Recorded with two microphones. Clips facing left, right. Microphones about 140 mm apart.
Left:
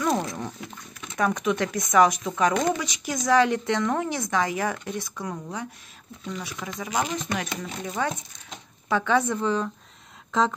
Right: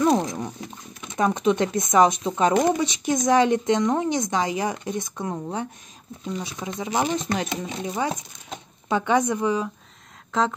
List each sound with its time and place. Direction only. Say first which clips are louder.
0.0 s a woman's voice: right 5 dB; 25° right (ahead or behind)
7.6 s speech: right 2 dB; 15° right (ahead or behind)
10.3 s speech: even; centre (ahead or behind)